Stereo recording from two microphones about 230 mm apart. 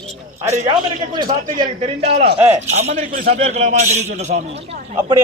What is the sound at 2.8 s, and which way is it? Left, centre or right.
A man's voice, right.